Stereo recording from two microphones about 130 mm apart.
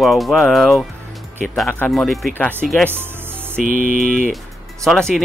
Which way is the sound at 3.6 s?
90° right.